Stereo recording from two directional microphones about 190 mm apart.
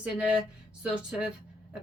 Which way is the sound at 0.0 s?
5° right (ahead or behind).